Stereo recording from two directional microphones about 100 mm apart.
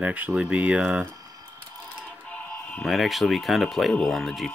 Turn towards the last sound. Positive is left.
turn(degrees=0)  # may be behind; listen again after turning